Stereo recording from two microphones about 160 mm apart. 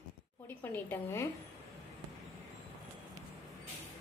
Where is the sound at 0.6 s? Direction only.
15° left (ahead or behind).